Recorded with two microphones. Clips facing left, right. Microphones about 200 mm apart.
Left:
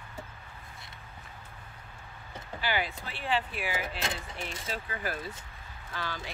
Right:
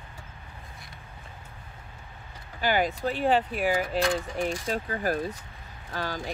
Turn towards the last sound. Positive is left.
turn(degrees=-45)  # may be behind; listen again after turning